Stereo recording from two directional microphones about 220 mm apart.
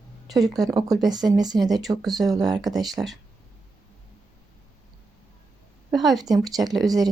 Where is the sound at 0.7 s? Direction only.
15° right (ahead or behind).